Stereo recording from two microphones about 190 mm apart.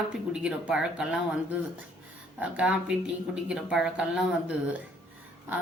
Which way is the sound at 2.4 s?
5° right (ahead or behind).